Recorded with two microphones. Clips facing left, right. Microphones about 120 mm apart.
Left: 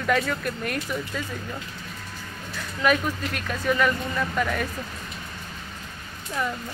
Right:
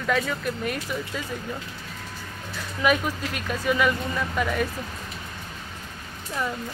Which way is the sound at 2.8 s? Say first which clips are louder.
Even; 5° right (ahead or behind).